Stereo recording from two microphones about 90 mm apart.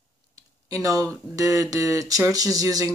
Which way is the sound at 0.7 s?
40° right (ahead or behind).